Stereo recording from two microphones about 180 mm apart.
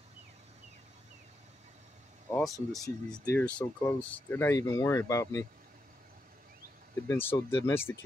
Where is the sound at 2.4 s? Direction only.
Centre (ahead or behind); by 5.4 s 15° left (ahead or behind).